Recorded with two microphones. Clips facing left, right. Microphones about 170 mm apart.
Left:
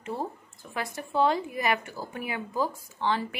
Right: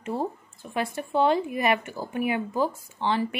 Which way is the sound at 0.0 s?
25° right (ahead or behind).